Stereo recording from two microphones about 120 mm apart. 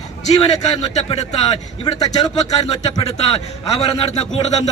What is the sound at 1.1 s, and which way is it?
Speech, 60° left (ahead or behind).